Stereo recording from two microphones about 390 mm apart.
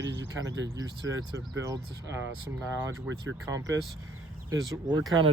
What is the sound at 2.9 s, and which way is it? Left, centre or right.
Speech, right.